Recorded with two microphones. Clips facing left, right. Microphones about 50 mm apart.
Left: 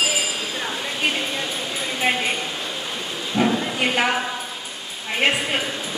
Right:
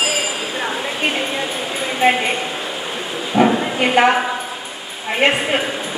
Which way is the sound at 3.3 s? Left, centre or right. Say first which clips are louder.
Right 6 dB; right.